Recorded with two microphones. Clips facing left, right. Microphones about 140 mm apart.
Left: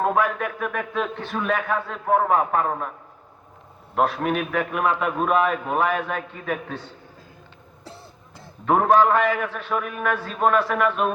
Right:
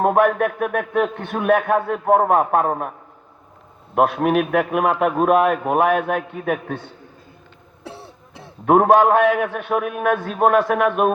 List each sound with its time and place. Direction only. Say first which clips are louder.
0.0 s a man's voice: right 6 dB; 55° right (ahead or behind)
3.9 s a man's voice: right 5 dB; 55° right (ahead or behind)
7.9 s a man's voice: right 7 dB; 65° right (ahead or behind)